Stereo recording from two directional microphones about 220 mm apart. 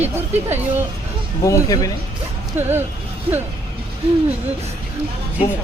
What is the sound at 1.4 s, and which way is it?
Speech, 15° left (ahead or behind).